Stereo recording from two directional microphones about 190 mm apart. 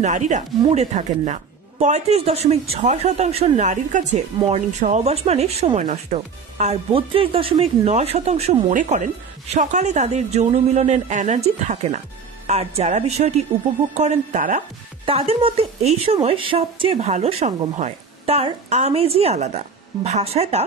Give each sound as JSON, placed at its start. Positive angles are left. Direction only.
{"t": 0.0, "sound": "a woman's voice", "side_deg": -40}
{"t": 15.0, "sound": "a woman's voice", "side_deg": -30}